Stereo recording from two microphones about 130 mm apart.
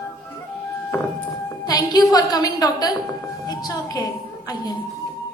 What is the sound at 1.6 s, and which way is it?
Music, 30° left (ahead or behind).